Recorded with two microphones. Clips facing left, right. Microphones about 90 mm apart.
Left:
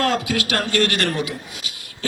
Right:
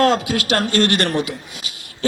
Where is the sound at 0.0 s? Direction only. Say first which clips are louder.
Right 4 dB; 25° right (ahead or behind).